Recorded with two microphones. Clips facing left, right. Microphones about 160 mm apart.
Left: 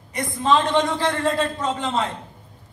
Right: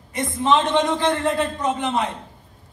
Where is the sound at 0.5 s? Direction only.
20° right (ahead or behind).